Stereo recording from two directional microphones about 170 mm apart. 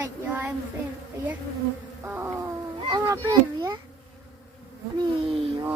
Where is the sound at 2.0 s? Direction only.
15° right (ahead or behind).